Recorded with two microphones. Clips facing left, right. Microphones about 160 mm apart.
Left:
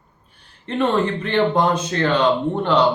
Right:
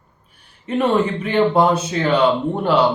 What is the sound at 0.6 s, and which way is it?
Speech, 10° right (ahead or behind).